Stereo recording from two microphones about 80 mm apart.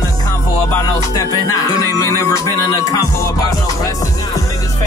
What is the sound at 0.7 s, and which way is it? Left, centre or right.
Music, left.